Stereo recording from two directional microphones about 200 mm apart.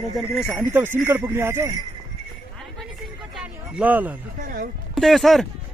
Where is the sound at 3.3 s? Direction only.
5° right (ahead or behind).